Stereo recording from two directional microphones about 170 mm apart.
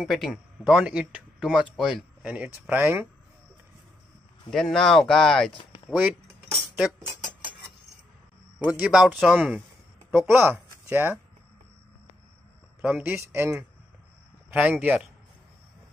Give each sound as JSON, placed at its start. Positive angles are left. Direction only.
{"t": 0.0, "sound": "speech", "side_deg": 0}
{"t": 4.5, "sound": "speech", "side_deg": 0}
{"t": 5.9, "sound": "speech", "side_deg": -10}
{"t": 8.6, "sound": "speech", "side_deg": -5}
{"t": 12.8, "sound": "speech", "side_deg": -10}